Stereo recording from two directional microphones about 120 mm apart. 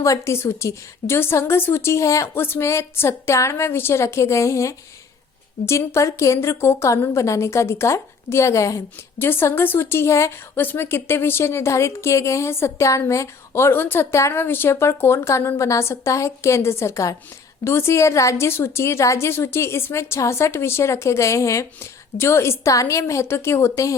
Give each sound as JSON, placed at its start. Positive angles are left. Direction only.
{"t": 0.0, "sound": "a woman's voice", "side_deg": 25}